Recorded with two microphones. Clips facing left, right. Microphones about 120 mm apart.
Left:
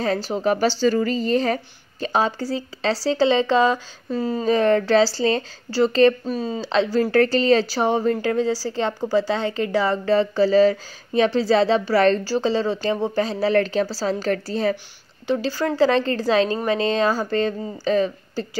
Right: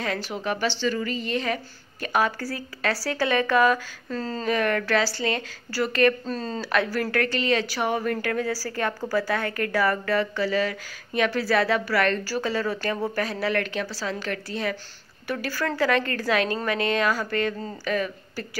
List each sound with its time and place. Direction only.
0.0 s a woman's voice: 35° left (ahead or behind)
4.1 s speech: 10° left (ahead or behind)
4.5 s a woman's voice: 30° left (ahead or behind)
6.2 s speech: 10° left (ahead or behind)
6.6 s a woman's voice: 25° left (ahead or behind)